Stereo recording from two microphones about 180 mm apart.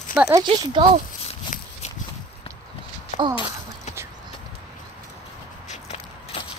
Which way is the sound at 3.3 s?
30° left (ahead or behind).